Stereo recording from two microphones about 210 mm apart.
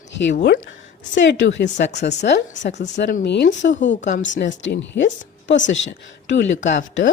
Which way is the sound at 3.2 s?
55° left (ahead or behind).